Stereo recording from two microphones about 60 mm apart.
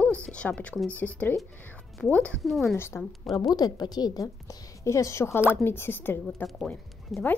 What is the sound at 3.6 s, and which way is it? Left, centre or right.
A woman's voice, left.